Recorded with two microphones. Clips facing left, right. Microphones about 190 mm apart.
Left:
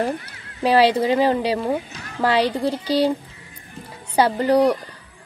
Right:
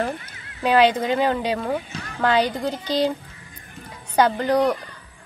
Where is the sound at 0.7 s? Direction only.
35° left (ahead or behind).